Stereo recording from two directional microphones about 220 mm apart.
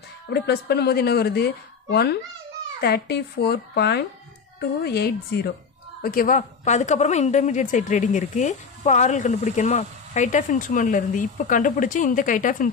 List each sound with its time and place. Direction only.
0.3 s a woman's voice: 50° left (ahead or behind)